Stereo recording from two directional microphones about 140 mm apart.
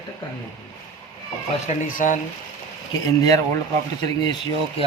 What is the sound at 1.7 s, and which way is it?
Speech, 65° left (ahead or behind).